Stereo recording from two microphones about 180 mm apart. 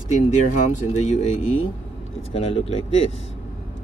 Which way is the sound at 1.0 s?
40° left (ahead or behind).